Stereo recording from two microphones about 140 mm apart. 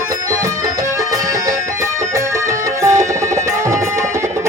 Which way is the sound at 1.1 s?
25° right (ahead or behind).